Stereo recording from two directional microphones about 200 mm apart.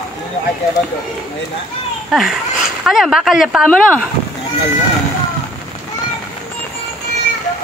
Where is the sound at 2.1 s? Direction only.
Centre (ahead or behind).